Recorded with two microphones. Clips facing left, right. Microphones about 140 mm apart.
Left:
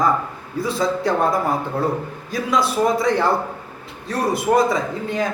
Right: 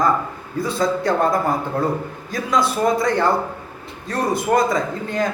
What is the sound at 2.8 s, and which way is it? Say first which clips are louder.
A man's voice: even; 5° left (ahead or behind).